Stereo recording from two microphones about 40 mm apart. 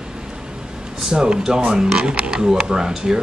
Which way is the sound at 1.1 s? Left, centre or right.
Right.